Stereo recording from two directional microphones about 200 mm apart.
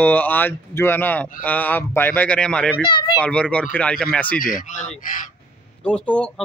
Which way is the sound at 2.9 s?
20° left (ahead or behind).